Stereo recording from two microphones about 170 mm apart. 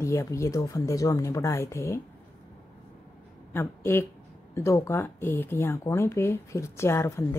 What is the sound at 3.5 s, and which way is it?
Speech, 15° left (ahead or behind).